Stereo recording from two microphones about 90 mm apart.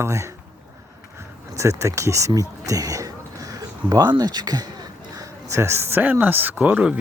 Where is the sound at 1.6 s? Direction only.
35° right (ahead or behind).